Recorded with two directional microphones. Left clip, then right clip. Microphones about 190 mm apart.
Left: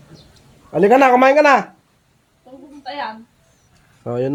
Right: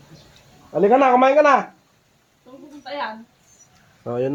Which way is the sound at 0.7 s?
30° left (ahead or behind).